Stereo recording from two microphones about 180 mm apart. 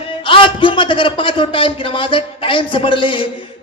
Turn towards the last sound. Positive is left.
turn(degrees=30)  # may be behind; listen again after turning